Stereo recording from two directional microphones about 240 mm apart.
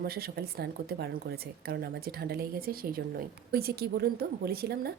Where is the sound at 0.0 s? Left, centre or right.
Right.